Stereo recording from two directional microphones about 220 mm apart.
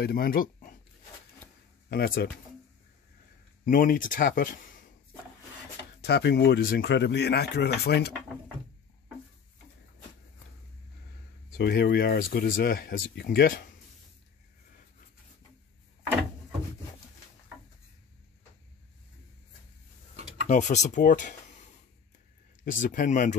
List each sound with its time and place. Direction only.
0.0 s speech: 45° left (ahead or behind)
1.9 s speech: 45° left (ahead or behind)
3.6 s speech: 40° left (ahead or behind)
5.9 s speech: 50° left (ahead or behind)
11.5 s speech: 45° left (ahead or behind)
20.4 s speech: 35° left (ahead or behind)
22.7 s speech: 35° left (ahead or behind)